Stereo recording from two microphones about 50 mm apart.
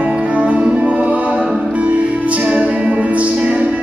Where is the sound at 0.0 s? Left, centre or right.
Right.